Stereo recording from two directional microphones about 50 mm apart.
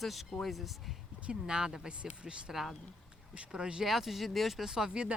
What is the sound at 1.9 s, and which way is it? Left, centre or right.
Speech, right.